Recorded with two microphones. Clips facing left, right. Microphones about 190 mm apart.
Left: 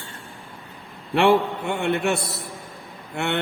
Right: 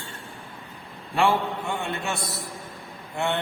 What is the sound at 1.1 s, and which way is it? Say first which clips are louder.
A man's voice: left 5 dB; 65° left (ahead or behind).